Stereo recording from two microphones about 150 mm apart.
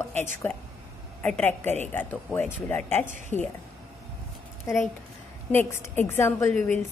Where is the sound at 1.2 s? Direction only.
10° left (ahead or behind).